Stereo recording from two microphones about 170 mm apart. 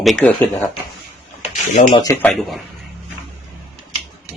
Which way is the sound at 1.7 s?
35° left (ahead or behind).